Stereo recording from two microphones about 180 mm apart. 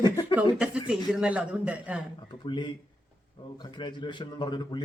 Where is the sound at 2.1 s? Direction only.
25° left (ahead or behind).